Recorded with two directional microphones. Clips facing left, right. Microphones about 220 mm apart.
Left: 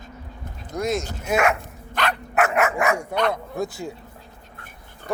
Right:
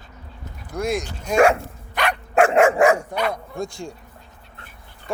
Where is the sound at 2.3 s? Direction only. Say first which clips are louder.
Right 7 dB; 30° right (ahead or behind).